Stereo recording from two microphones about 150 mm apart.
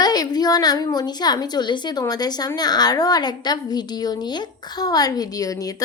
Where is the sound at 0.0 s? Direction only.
25° left (ahead or behind).